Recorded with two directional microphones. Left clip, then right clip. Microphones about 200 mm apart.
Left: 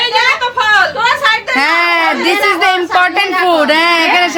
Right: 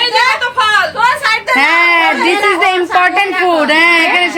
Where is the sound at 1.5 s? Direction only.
5° left (ahead or behind).